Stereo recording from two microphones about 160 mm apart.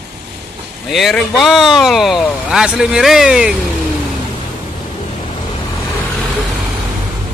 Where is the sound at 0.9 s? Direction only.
Centre (ahead or behind).